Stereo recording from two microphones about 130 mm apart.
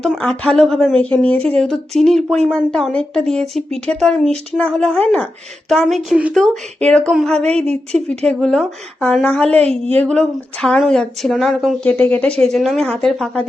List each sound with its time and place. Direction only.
0.2 s a woman's voice: 10° left (ahead or behind)
7.5 s a woman's voice: 55° right (ahead or behind)
8.2 s a woman's voice: 5° left (ahead or behind)
9.5 s a woman's voice: 50° right (ahead or behind)
9.9 s speech: 10° left (ahead or behind)
11.9 s speech: 10° left (ahead or behind)